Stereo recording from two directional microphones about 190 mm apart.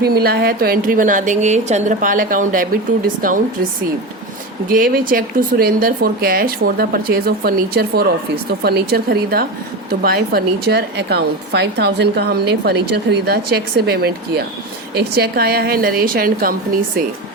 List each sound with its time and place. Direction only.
0.0 s speech: 55° right (ahead or behind)
4.7 s a woman's voice: 50° right (ahead or behind)